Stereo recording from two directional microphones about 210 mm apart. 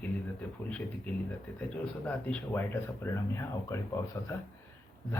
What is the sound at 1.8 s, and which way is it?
Speech, 5° left (ahead or behind).